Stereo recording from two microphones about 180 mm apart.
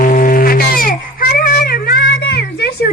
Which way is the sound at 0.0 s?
50° left (ahead or behind).